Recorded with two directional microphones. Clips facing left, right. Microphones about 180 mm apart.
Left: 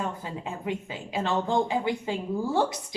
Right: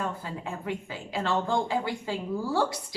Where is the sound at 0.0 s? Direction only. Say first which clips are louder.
Left 1 dB; 20° left (ahead or behind).